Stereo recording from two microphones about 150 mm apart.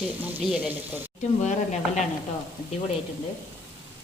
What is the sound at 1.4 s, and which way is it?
Speech, 50° left (ahead or behind).